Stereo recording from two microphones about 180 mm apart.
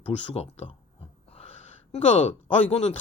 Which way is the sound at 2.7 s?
35° left (ahead or behind).